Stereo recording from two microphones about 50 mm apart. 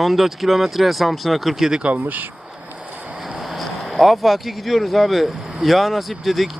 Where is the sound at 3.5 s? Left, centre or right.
Centre.